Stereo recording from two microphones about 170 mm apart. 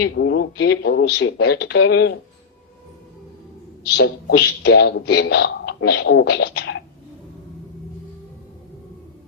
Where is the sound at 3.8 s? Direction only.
80° left.